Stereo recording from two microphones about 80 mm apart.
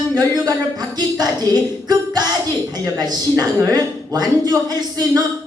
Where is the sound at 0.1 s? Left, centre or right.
Right.